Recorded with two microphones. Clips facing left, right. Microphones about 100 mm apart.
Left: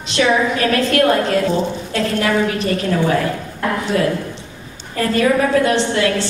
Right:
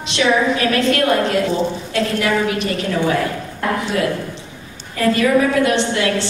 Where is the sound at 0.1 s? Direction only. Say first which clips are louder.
Even; 40° left (ahead or behind).